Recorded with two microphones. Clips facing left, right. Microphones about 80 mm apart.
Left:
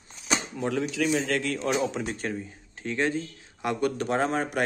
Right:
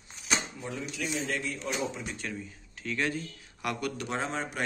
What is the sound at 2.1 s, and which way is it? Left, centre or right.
Speech, left.